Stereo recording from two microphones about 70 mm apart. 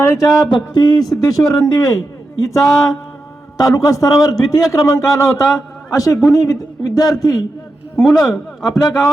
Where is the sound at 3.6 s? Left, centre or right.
Left.